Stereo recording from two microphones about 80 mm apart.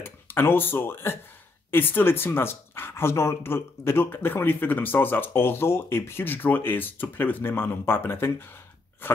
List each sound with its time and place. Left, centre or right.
0.0 s speech: left